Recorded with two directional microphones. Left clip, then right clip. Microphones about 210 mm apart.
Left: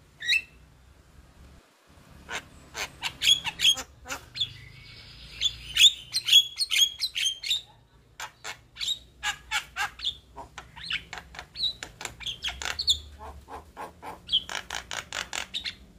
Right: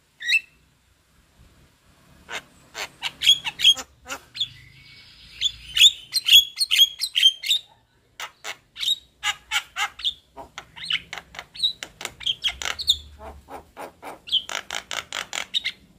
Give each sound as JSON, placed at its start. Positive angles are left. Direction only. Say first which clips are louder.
{"t": 2.2, "sound": "bird", "louder": "right 2 dB", "side_deg": -20}